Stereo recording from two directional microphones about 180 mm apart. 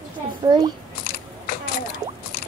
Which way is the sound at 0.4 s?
15° right (ahead or behind).